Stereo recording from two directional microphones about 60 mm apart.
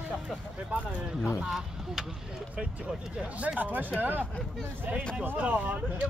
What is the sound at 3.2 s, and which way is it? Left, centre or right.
Speech, right.